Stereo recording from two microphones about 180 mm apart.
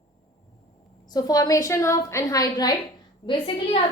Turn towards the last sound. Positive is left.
turn(degrees=30)  # may be behind; listen again after turning